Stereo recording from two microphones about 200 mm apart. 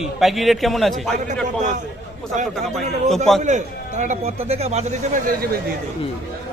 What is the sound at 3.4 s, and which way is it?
Speech, 35° right (ahead or behind).